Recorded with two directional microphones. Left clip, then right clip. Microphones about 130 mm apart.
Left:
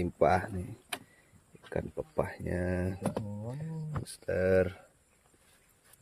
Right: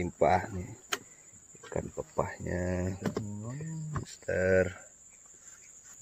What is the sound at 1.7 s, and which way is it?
Speech, 10° left (ahead or behind).